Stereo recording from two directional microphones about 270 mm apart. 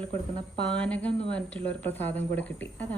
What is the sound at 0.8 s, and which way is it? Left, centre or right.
Speech, centre.